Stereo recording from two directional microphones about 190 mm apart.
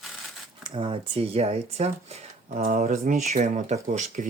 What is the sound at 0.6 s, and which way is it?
Speech, 25° right (ahead or behind).